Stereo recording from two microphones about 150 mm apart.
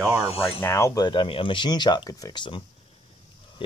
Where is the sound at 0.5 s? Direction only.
15° left (ahead or behind).